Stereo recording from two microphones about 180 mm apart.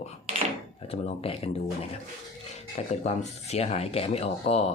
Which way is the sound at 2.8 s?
35° left (ahead or behind).